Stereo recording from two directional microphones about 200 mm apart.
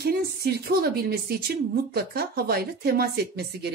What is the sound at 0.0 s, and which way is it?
A woman's voice, 50° right (ahead or behind).